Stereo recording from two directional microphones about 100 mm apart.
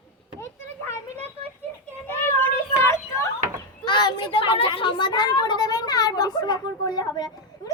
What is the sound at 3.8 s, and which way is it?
A woman's voice, 50° left (ahead or behind).